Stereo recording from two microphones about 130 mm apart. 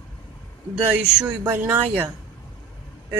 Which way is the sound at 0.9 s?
10° right (ahead or behind).